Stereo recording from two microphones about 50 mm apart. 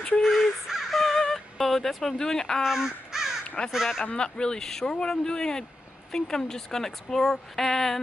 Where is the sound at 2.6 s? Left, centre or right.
Centre.